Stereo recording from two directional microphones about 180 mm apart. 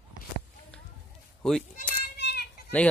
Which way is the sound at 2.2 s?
65° left (ahead or behind).